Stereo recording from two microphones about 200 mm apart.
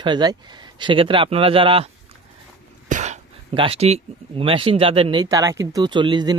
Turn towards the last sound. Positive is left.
turn(degrees=-20)  # may be behind; listen again after turning